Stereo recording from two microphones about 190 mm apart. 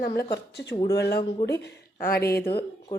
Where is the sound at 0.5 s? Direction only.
60° left (ahead or behind).